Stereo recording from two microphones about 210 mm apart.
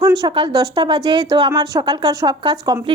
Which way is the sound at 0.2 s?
20° right (ahead or behind).